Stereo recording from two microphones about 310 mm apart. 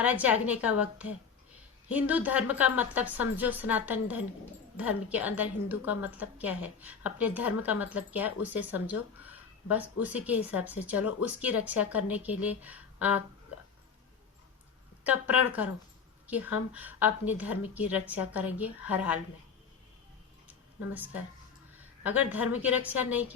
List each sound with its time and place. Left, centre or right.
0.0 s a woman's voice: centre
9.1 s a sound: centre
9.7 s a woman's voice: centre
15.0 s a woman's voice: centre
16.7 s a woman's voice: centre
20.9 s a woman's voice: centre